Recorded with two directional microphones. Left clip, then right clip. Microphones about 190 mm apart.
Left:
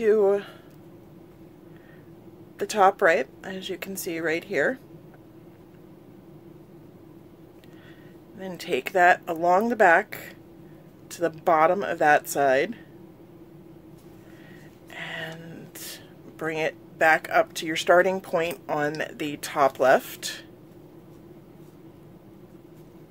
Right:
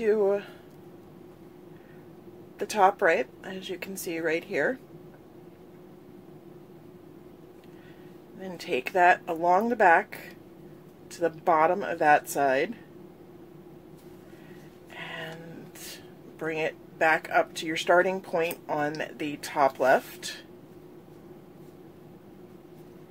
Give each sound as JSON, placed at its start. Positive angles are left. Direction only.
{"t": 0.0, "sound": "speech", "side_deg": 30}
{"t": 2.6, "sound": "speech", "side_deg": 30}
{"t": 8.4, "sound": "speech", "side_deg": 30}
{"t": 14.9, "sound": "a sound", "side_deg": 35}
{"t": 15.8, "sound": "speech", "side_deg": 35}